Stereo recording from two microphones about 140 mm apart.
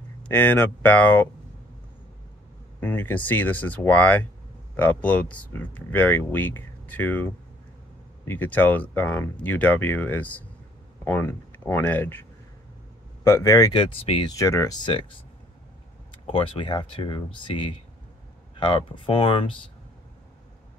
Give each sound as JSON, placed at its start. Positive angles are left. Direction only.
{"t": 0.2, "sound": "speech", "side_deg": 15}
{"t": 2.8, "sound": "speech", "side_deg": 10}
{"t": 8.3, "sound": "speech", "side_deg": 15}
{"t": 14.2, "sound": "speech", "side_deg": 25}